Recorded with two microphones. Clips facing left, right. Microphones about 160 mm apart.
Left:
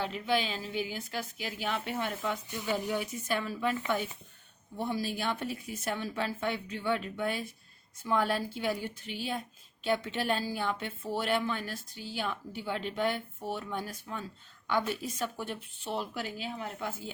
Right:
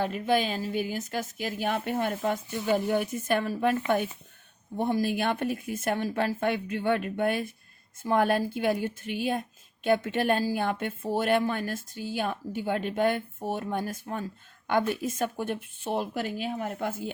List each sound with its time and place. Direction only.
0.0 s a woman's voice: 45° right (ahead or behind)